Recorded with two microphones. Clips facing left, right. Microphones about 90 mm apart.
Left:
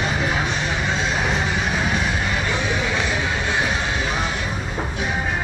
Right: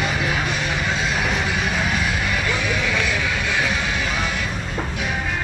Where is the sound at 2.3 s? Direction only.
25° left (ahead or behind).